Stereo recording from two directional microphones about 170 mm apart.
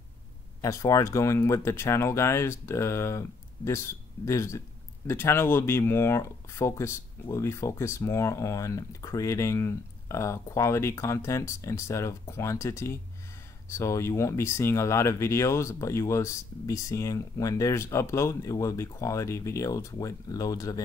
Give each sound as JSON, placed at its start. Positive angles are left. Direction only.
{"t": 0.6, "sound": "speech", "side_deg": 20}